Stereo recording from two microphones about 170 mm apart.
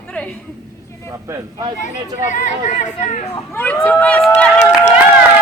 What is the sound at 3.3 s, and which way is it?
Speech, 10° left (ahead or behind).